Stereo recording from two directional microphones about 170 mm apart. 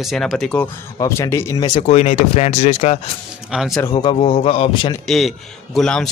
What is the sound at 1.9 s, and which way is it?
Speech, 40° left (ahead or behind).